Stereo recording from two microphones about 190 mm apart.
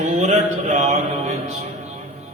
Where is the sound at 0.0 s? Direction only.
35° right (ahead or behind).